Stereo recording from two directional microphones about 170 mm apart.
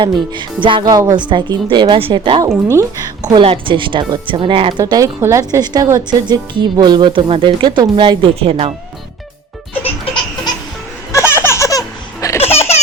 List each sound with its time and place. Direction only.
0.0 s speech: 30° right (ahead or behind)
4.8 s speech: 20° right (ahead or behind)
11.1 s baby laughter: 15° left (ahead or behind)
12.4 s baby laughter: 35° left (ahead or behind)